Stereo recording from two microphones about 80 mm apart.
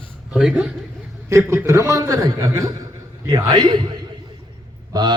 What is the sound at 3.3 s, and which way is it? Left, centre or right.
Speech, right.